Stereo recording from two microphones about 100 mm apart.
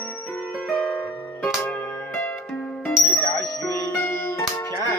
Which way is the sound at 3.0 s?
25° left (ahead or behind).